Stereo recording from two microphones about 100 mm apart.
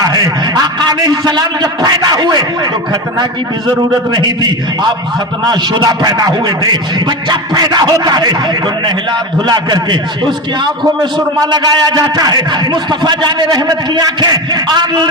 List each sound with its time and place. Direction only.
0.0 s a man's voice: 40° right (ahead or behind)
4.1 s a man's voice: 45° right (ahead or behind)
9.5 s a man's voice: 45° right (ahead or behind)